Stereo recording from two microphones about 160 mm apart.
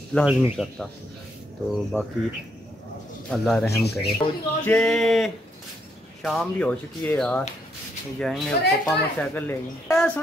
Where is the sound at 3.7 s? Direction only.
90° left.